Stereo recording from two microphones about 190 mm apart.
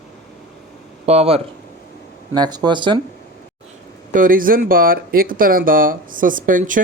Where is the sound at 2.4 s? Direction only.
20° right (ahead or behind).